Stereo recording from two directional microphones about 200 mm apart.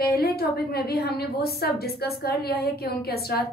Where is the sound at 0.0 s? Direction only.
50° left (ahead or behind).